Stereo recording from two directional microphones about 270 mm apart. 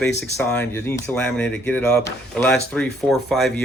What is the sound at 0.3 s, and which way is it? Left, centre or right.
Speech, centre.